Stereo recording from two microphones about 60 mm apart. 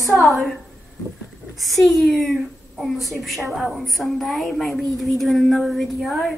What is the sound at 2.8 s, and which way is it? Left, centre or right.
A woman's voice, centre.